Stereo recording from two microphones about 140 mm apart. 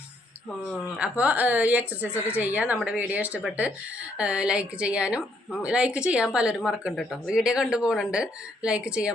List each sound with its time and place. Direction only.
0.9 s speech: 10° right (ahead or behind)
2.1 s a woman's voice: 15° left (ahead or behind)
2.4 s speech: 10° right (ahead or behind)